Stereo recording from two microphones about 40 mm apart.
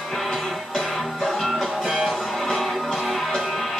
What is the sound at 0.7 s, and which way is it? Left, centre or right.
Music, centre.